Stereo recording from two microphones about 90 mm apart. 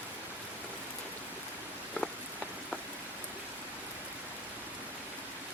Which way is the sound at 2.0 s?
15° left (ahead or behind).